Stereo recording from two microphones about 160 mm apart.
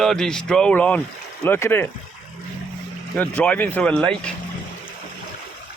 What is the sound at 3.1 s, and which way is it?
Speech, 10° left (ahead or behind).